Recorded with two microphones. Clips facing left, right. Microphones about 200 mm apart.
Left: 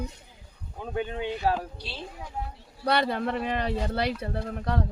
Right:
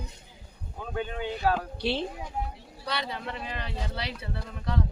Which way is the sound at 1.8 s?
65° right (ahead or behind).